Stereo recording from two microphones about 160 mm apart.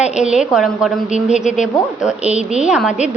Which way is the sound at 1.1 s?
50° left (ahead or behind).